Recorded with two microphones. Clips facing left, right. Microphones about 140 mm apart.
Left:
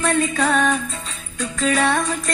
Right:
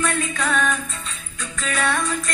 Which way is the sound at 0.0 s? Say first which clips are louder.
Left 5 dB; 40° left (ahead or behind).